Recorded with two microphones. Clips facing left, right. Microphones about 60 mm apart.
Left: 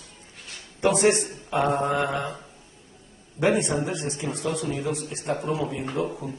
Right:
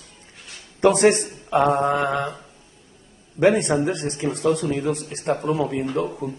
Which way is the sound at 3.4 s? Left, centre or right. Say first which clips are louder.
Right 5 dB; right.